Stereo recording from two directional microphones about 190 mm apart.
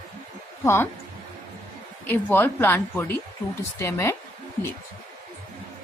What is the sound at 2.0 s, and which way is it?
Speech, 10° left (ahead or behind).